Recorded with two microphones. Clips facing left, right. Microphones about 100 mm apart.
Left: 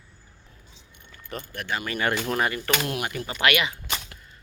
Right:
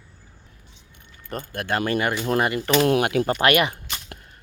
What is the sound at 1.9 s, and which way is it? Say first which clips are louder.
Speech: even; 20° right (ahead or behind).